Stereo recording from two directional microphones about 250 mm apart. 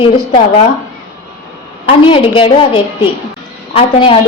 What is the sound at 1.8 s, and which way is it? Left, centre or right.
A woman's voice, left.